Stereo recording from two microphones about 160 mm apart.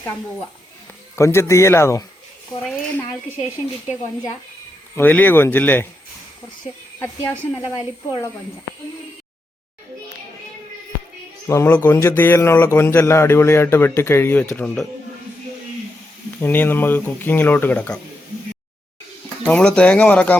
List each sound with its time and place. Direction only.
1.1 s speech: 15° left (ahead or behind)
2.6 s speech: 5° left (ahead or behind)
4.9 s speech: 10° left (ahead or behind)
7.0 s speech: 15° left (ahead or behind)
11.4 s speech: 15° left (ahead or behind)
16.4 s speech: 10° left (ahead or behind)
19.5 s speech: 5° left (ahead or behind)